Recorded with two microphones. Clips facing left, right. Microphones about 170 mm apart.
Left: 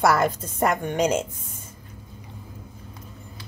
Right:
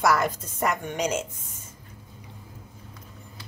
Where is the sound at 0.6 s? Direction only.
55° left (ahead or behind).